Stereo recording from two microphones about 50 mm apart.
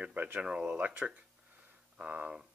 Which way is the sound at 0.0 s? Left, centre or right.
Right.